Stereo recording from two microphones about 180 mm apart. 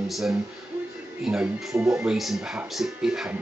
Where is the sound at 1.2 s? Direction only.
Centre (ahead or behind).